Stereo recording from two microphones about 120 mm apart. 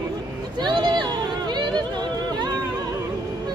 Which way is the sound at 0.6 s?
40° right (ahead or behind).